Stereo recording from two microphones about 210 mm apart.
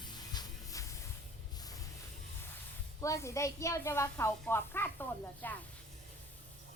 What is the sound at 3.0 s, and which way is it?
Speech, 15° left (ahead or behind).